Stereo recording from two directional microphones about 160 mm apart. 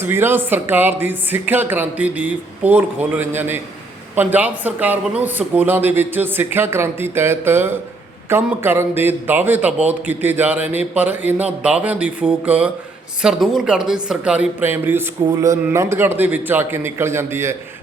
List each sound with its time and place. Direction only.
0.0 s a man's voice: 15° right (ahead or behind)